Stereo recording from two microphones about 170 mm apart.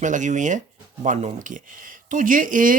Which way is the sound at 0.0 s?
45° right (ahead or behind).